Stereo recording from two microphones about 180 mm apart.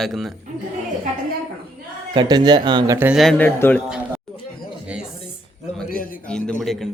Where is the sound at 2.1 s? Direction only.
25° right (ahead or behind).